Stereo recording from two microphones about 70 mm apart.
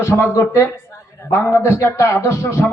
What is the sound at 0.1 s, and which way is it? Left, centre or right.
Speech, left.